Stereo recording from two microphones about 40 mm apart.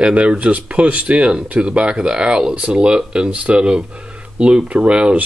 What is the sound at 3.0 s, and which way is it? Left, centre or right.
Speech, centre.